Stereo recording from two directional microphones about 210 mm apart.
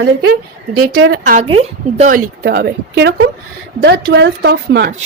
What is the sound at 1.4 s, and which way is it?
Speech, 30° right (ahead or behind).